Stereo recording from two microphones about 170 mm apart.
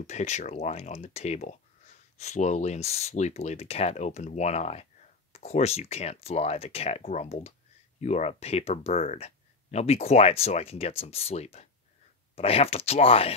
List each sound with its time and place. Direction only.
0.0 s speech: 40° left (ahead or behind)